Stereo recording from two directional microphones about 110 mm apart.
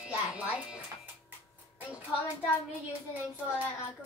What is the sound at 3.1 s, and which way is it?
Speech, 15° right (ahead or behind).